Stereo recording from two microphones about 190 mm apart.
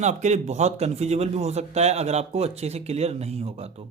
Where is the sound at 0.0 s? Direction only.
40° right (ahead or behind).